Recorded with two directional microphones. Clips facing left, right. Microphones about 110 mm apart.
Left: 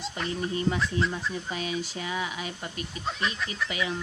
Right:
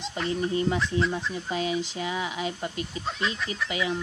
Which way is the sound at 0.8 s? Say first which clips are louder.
Right 2 dB; centre (ahead or behind).